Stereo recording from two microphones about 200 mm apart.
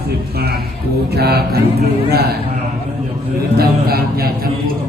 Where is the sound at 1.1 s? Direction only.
55° right (ahead or behind).